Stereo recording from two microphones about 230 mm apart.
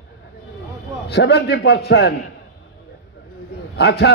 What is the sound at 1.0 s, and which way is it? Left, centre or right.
A man's voice, left.